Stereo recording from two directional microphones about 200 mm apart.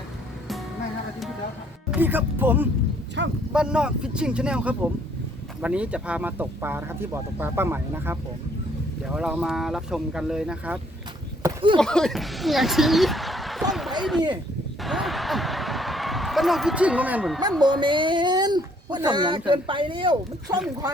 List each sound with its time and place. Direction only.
1.9 s speech: 10° right (ahead or behind)
3.2 s speech: 60° right (ahead or behind)
3.5 s speech: 5° right (ahead or behind)
11.4 s speech: 25° right (ahead or behind)
11.8 s speech: 5° left (ahead or behind)
14.8 s a sound: centre (ahead or behind)
17.6 s speech: 25° right (ahead or behind)